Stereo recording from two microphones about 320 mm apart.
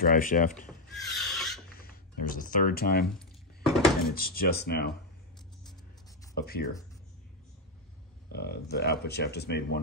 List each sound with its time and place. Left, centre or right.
0.0 s speech: left
0.7 s a sound: centre
1.8 s speech: left
3.2 s a sound: centre
4.1 s speech: left
6.3 s speech: left
8.3 s speech: left